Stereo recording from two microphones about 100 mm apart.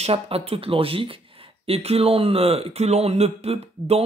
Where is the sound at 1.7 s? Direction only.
85° right.